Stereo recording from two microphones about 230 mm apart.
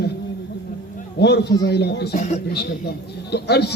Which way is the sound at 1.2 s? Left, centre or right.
Left.